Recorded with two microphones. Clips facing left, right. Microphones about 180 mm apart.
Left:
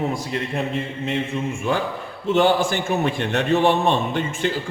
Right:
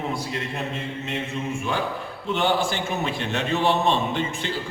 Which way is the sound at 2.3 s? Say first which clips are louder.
Left 5 dB; 45° left (ahead or behind).